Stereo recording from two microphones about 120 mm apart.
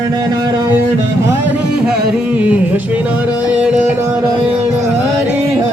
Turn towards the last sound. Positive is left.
turn(degrees=-10)  # may be behind; listen again after turning